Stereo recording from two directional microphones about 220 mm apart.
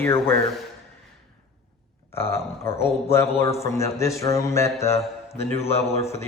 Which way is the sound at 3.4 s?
15° left (ahead or behind).